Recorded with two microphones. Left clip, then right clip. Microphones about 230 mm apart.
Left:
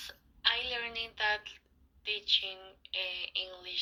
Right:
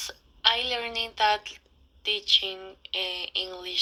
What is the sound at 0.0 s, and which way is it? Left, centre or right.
A woman's voice, right.